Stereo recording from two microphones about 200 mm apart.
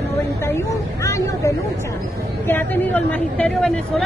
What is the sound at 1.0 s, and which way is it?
Speech, 15° left (ahead or behind).